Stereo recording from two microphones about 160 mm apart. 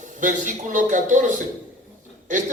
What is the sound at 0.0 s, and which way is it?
A man's voice, 55° right (ahead or behind).